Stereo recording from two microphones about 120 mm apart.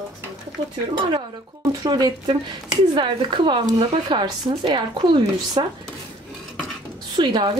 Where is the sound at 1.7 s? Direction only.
30° right (ahead or behind).